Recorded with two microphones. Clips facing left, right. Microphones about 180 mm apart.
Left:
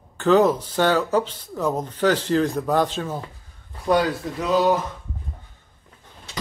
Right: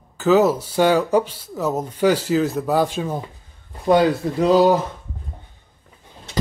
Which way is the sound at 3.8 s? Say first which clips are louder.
Right 4 dB; 25° right (ahead or behind).